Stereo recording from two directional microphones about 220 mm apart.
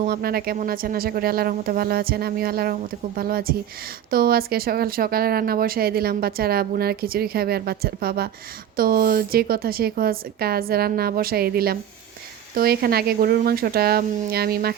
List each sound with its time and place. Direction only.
0.0 s speech: 45° right (ahead or behind)